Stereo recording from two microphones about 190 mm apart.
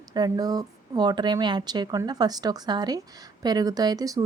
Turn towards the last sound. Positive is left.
turn(degrees=-20)  # may be behind; listen again after turning